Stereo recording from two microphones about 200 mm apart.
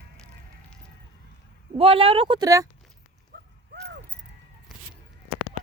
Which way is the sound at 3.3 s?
55° right (ahead or behind).